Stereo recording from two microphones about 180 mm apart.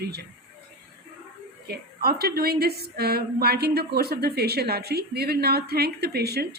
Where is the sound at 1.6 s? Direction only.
60° right (ahead or behind).